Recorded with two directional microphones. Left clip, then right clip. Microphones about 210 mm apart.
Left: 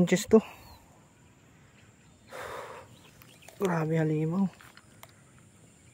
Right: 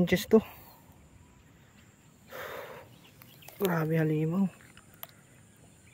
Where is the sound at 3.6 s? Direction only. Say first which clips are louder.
Even; 5° left (ahead or behind).